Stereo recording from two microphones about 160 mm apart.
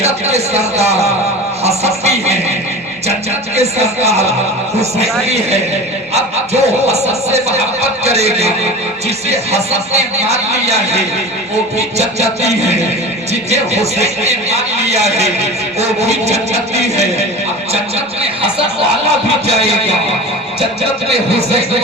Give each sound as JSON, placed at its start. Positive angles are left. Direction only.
{"t": 0.0, "sound": "speech", "side_deg": -40}
{"t": 1.6, "sound": "a sound", "side_deg": -40}
{"t": 3.5, "sound": "a man's voice", "side_deg": -40}